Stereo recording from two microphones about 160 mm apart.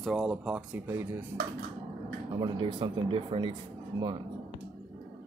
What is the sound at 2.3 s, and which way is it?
Speech, 30° right (ahead or behind).